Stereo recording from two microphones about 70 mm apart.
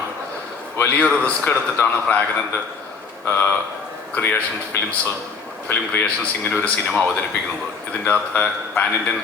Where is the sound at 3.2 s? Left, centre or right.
Left.